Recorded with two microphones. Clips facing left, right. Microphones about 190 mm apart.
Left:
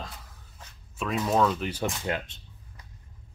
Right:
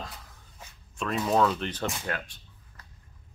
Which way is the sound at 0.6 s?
10° right (ahead or behind).